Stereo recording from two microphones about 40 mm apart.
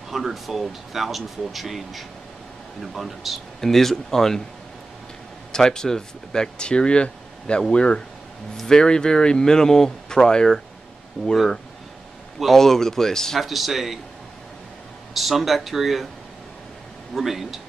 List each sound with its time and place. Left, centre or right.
0.1 s speech: centre
3.6 s speech: centre
5.5 s speech: centre
11.2 s speech: centre
12.4 s speech: centre
13.4 s speech: centre
15.1 s speech: centre
17.1 s speech: centre